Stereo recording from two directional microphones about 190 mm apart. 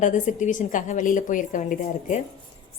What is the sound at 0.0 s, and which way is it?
A woman's voice, 40° left (ahead or behind).